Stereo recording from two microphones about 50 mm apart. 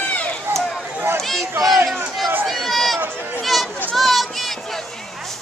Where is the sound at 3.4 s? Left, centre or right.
Centre.